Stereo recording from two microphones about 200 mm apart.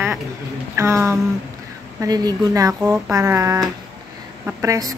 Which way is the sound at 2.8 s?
5° right (ahead or behind).